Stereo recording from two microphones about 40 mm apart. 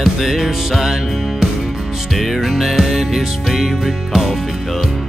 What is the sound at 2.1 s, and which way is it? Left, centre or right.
Music, centre.